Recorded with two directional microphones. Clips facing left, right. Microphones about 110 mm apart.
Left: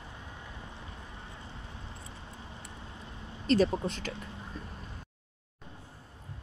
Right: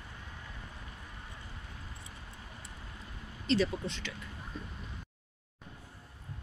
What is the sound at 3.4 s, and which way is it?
Speech, 45° left (ahead or behind).